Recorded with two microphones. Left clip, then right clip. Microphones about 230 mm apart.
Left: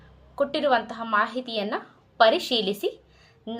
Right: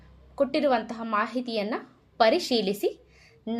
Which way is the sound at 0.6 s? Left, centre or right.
Right.